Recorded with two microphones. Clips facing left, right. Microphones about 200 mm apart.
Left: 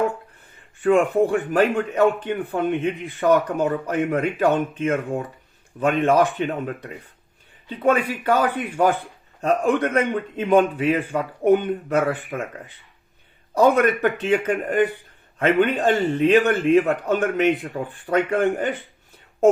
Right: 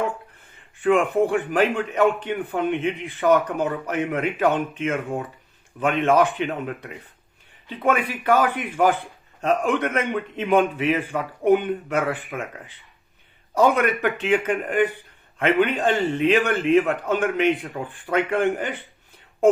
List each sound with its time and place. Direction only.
0.9 s a man's voice: 35° left (ahead or behind)
13.5 s a man's voice: 35° left (ahead or behind)